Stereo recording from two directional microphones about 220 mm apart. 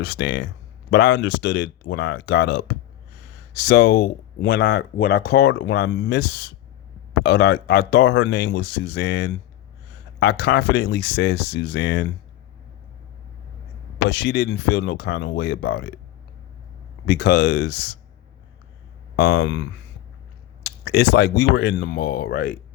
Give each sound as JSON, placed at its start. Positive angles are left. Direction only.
{"t": 0.0, "sound": "speech", "side_deg": 50}
{"t": 14.1, "sound": "speech", "side_deg": 50}
{"t": 17.1, "sound": "speech", "side_deg": 50}
{"t": 19.1, "sound": "speech", "side_deg": 50}
{"t": 20.7, "sound": "speech", "side_deg": 50}